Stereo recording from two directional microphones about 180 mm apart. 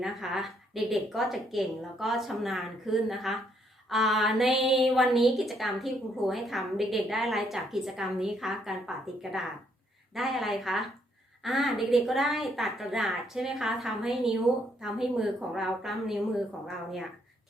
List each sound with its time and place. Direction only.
0.0 s a woman's voice: centre (ahead or behind)